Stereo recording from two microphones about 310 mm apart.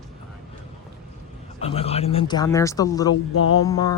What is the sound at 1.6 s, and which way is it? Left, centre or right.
Speech, centre.